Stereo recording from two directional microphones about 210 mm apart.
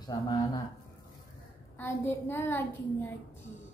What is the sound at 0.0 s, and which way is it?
Speech, 20° left (ahead or behind).